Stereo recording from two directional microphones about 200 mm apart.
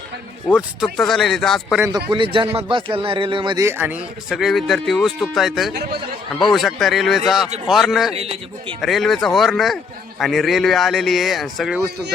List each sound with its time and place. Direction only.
0.5 s speech: centre (ahead or behind)
1.8 s a man's voice: 10° right (ahead or behind)
2.0 s a man's voice: 25° right (ahead or behind); by 5.7 s centre (ahead or behind)
5.7 s a man's voice: 50° right (ahead or behind)
6.4 s speech: centre (ahead or behind)
8.1 s a man's voice: 30° right (ahead or behind)
8.8 s speech: centre (ahead or behind)